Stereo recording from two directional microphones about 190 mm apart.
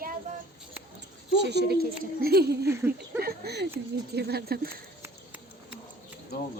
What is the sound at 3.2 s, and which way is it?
A woman's voice, 60° right (ahead or behind).